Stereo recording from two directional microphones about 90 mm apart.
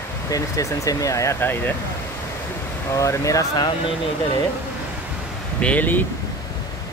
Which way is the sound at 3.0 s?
40° left (ahead or behind).